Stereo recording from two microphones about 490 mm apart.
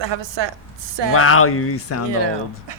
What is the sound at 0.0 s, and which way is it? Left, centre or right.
Speech, right.